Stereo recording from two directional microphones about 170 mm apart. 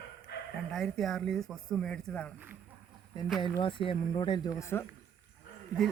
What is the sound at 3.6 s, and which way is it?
Speech, 30° left (ahead or behind).